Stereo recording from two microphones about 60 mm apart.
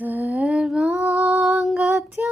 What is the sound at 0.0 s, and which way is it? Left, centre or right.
Lullaby, right.